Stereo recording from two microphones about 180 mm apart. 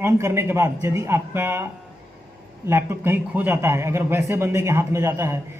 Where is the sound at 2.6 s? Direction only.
15° right (ahead or behind).